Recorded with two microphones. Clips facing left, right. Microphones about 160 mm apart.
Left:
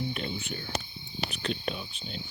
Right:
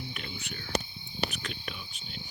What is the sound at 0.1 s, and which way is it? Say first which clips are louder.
Speech: left 7 dB; 30° left (ahead or behind).